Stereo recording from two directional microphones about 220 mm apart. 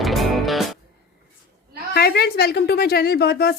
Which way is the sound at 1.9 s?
45° left (ahead or behind).